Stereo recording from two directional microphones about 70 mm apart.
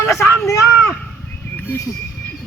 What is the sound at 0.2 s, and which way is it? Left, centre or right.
Speech, left.